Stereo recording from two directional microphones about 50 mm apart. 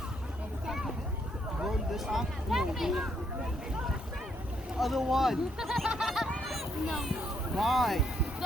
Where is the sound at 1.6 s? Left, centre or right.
Centre.